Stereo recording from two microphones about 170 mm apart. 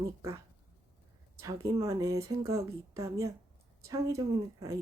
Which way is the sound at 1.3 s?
20° right (ahead or behind).